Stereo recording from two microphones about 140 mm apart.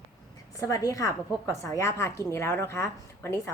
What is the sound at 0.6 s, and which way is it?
A woman's voice, 25° left (ahead or behind).